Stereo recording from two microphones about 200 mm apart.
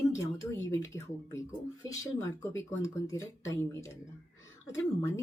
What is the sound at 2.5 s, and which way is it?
Speech, 15° left (ahead or behind).